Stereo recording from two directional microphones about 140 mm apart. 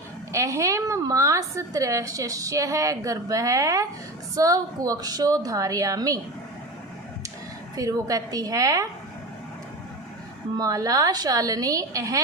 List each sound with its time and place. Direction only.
0.3 s a woman's voice: 20° right (ahead or behind)
7.8 s a woman's voice: 25° right (ahead or behind)
10.6 s a woman's voice: 25° right (ahead or behind)